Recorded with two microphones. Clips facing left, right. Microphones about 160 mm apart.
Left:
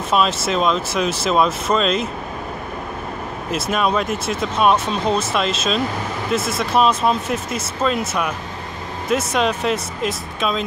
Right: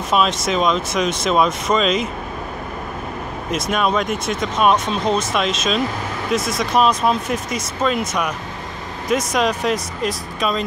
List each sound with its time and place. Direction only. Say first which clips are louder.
0.1 s speech: even; centre (ahead or behind)
3.4 s speech: even; 5° left (ahead or behind)